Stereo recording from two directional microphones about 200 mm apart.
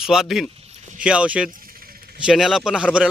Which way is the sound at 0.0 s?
Centre (ahead or behind).